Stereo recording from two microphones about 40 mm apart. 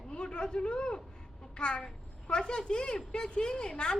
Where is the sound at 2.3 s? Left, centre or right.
Left.